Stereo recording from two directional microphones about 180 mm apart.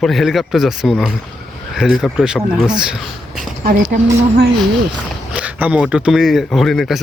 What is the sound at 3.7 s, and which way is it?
Speech, 55° right (ahead or behind).